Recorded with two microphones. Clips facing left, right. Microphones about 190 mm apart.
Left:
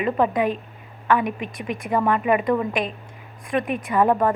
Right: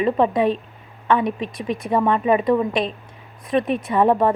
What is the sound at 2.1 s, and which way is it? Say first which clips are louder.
A woman's voice: right 2 dB; 25° right (ahead or behind).